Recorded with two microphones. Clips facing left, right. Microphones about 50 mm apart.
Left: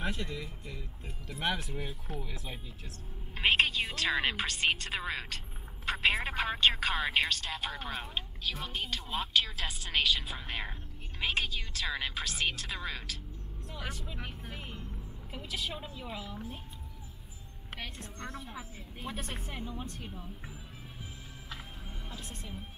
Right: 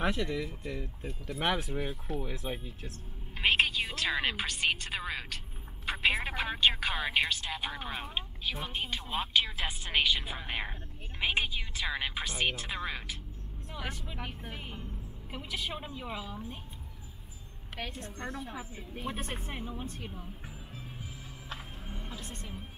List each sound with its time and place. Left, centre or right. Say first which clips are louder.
0.0 s speech: right 5 dB; right
3.3 s a sound: even; centre
4.1 s speech: left 1 dB; centre; by 14.0 s right
14.0 s speech: right 2 dB; centre
18.0 s speech: right 3 dB; right
19.0 s speech: right 2 dB; centre
21.8 s music: right 2 dB; centre